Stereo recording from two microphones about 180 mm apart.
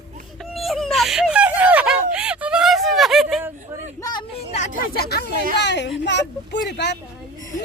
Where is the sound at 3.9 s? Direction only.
20° left (ahead or behind).